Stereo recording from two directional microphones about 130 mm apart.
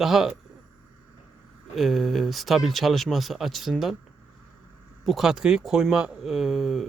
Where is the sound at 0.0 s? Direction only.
5° right (ahead or behind).